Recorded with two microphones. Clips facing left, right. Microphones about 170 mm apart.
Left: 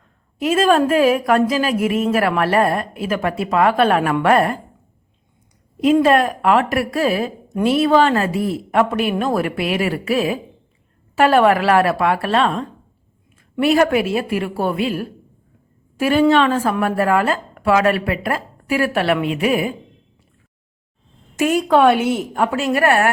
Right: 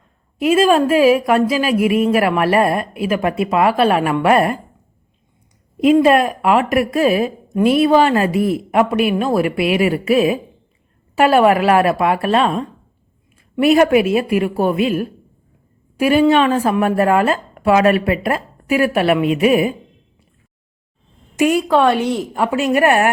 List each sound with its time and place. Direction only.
0.3 s a woman's voice: 10° right (ahead or behind)
5.8 s a woman's voice: 15° right (ahead or behind)
21.3 s a woman's voice: 10° right (ahead or behind)
21.7 s a woman's voice: centre (ahead or behind)
22.5 s a woman's voice: 15° right (ahead or behind)